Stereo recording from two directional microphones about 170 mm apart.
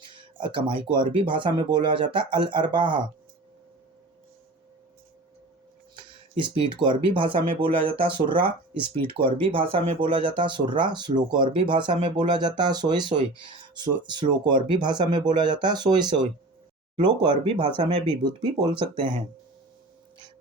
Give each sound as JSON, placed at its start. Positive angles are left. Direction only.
{"t": 0.0, "sound": "a sound", "side_deg": -30}
{"t": 0.8, "sound": "speech", "side_deg": -30}
{"t": 6.0, "sound": "speech", "side_deg": -30}